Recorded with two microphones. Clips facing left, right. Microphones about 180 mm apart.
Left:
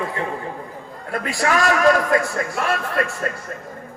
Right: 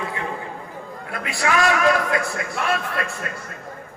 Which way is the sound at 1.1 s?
40° left (ahead or behind).